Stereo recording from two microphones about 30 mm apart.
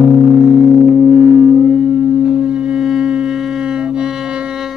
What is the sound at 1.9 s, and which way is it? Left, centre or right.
Music, right.